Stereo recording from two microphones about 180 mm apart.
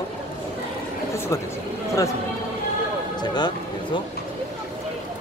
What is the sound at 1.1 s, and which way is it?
Speech, 15° left (ahead or behind).